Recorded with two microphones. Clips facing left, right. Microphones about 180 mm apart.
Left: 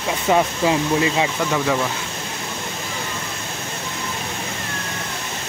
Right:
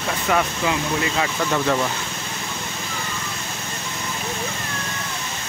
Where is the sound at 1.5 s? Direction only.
5° left (ahead or behind).